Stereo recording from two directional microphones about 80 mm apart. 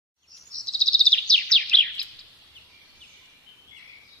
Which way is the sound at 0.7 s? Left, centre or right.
Centre.